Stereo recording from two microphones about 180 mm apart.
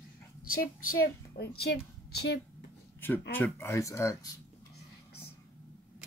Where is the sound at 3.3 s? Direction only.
10° left (ahead or behind).